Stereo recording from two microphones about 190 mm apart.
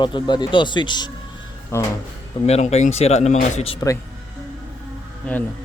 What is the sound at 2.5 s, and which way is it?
Speech, 35° left (ahead or behind).